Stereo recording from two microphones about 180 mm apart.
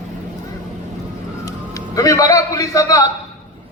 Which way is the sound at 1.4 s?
20° left (ahead or behind).